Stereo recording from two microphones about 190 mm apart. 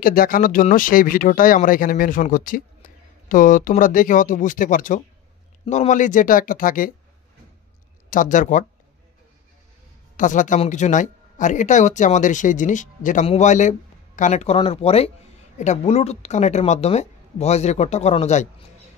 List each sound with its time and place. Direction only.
0.0 s speech: 50° left (ahead or behind)
8.1 s speech: 45° left (ahead or behind)
10.1 s speech: 40° left (ahead or behind)